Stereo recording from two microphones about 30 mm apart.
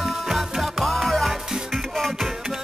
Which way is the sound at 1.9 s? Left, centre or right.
Centre.